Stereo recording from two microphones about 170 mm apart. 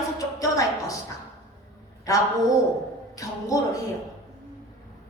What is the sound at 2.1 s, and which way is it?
A woman's voice, 20° left (ahead or behind).